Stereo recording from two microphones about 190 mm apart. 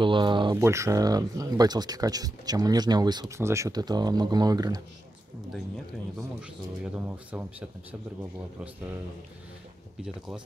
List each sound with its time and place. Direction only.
0.0 s speech: 25° right (ahead or behind)
0.6 s speech: 15° right (ahead or behind)
7.1 s speech: 10° right (ahead or behind)
10.0 s speech: 5° right (ahead or behind)